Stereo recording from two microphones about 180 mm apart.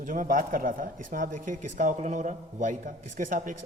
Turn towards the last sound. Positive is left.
turn(degrees=-45)  # may be behind; listen again after turning